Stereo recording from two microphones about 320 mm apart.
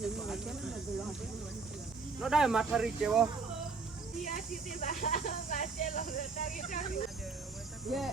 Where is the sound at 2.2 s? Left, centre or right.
Centre.